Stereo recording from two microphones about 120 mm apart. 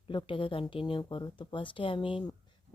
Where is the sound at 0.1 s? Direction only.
45° left (ahead or behind).